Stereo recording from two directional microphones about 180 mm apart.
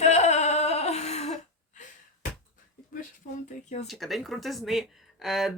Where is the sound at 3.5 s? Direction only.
45° left (ahead or behind).